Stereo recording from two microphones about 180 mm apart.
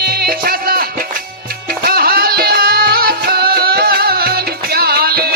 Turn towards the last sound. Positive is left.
turn(degrees=-60)  # may be behind; listen again after turning